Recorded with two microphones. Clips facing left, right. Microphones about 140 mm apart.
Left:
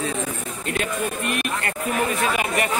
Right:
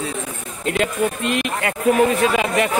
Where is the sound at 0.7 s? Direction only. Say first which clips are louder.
Right 5 dB; 90° right.